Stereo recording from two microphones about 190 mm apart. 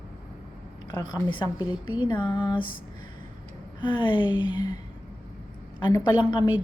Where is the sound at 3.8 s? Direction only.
25° left (ahead or behind).